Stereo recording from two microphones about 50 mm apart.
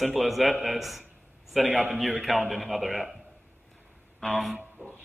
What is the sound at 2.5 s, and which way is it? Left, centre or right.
Speech, centre.